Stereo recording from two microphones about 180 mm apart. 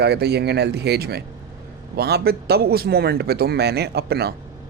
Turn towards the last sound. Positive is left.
turn(degrees=-65)  # may be behind; listen again after turning